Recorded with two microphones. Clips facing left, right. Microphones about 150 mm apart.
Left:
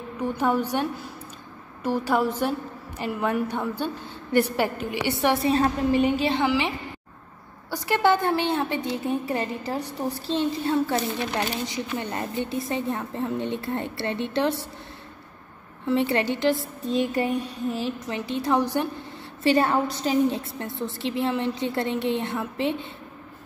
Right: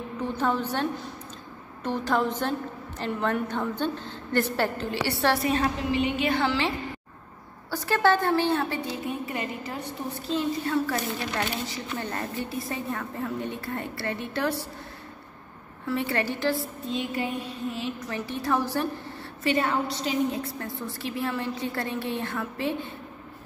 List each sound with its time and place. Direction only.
0.2 s a woman's voice: 10° left (ahead or behind)
5.5 s a woman's voice: 40° left (ahead or behind)
6.4 s a woman's voice: 15° left (ahead or behind)
7.7 s a woman's voice: 15° left (ahead or behind)
9.3 s a woman's voice: 30° left (ahead or behind)
15.9 s a woman's voice: 20° left (ahead or behind)
18.0 s a woman's voice: 20° left (ahead or behind)
19.4 s a woman's voice: 35° left (ahead or behind)
20.5 s a woman's voice: 25° left (ahead or behind)